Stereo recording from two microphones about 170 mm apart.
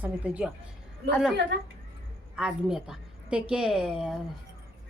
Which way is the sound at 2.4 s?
5° right (ahead or behind).